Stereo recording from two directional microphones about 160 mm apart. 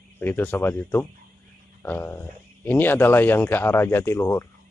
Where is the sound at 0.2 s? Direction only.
10° left (ahead or behind).